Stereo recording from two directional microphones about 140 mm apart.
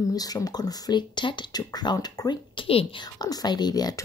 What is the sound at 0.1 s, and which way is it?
Speech, 25° left (ahead or behind).